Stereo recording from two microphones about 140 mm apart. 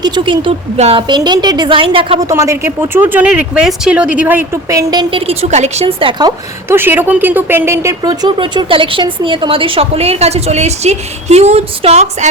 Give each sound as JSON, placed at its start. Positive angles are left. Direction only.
{"t": 0.0, "sound": "speech", "side_deg": -30}
{"t": 0.8, "sound": "a woman's voice", "side_deg": -45}
{"t": 1.0, "sound": "a woman's voice", "side_deg": -30}
{"t": 2.2, "sound": "speech", "side_deg": -20}
{"t": 4.7, "sound": "speech", "side_deg": -25}
{"t": 5.2, "sound": "a woman's voice", "side_deg": -45}
{"t": 6.7, "sound": "a woman's voice", "side_deg": -15}